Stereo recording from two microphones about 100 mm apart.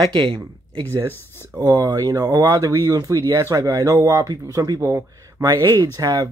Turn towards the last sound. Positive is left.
turn(degrees=-35)  # may be behind; listen again after turning